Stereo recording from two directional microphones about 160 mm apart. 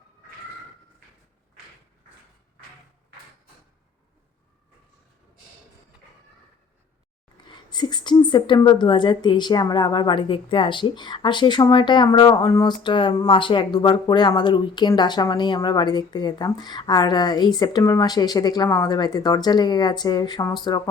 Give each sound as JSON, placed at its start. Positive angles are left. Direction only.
{"t": 7.4, "sound": "a woman's voice", "side_deg": 25}